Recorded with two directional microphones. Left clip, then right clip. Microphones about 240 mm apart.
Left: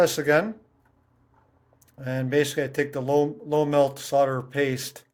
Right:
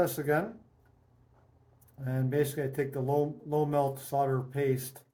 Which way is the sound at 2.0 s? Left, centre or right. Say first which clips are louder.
Left 7 dB; left.